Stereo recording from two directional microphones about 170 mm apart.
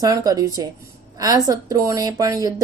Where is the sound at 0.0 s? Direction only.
20° right (ahead or behind).